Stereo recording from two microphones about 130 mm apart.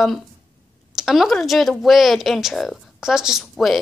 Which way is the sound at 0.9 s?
Centre (ahead or behind).